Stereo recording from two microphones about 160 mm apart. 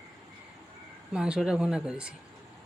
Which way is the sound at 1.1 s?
5° right (ahead or behind).